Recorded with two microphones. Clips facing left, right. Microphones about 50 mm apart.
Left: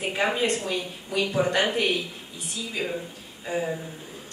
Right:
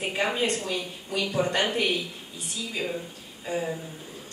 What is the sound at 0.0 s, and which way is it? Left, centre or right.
A woman's voice, centre.